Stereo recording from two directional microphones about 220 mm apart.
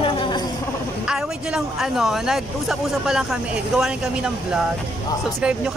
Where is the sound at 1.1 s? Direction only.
5° right (ahead or behind).